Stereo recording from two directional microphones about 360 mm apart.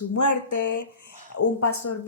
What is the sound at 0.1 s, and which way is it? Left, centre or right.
A woman's voice, left.